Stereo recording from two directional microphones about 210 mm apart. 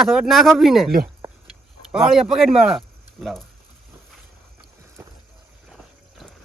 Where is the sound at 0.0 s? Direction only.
Centre (ahead or behind).